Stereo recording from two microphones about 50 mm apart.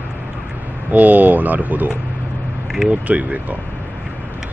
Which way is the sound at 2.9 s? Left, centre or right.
Right.